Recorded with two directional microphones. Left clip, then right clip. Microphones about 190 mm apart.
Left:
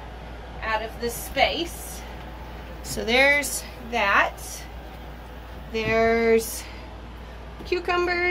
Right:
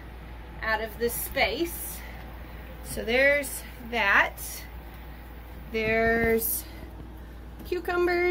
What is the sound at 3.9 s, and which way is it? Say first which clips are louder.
Speech: left 2 dB; 10° right (ahead or behind).